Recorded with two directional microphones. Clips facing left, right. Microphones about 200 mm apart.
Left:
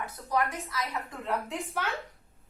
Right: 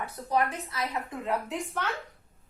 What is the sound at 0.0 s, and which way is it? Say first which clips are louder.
Speech: right 2 dB; 30° right (ahead or behind).